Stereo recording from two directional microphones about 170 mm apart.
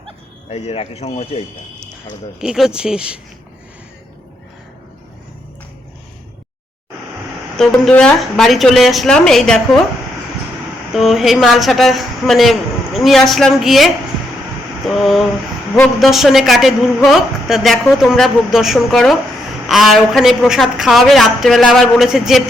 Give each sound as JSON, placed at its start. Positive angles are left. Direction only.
{"t": 0.5, "sound": "speech", "side_deg": 35}
{"t": 2.4, "sound": "a woman's voice", "side_deg": -5}
{"t": 7.6, "sound": "a woman's voice", "side_deg": 5}
{"t": 10.9, "sound": "a woman's voice", "side_deg": 0}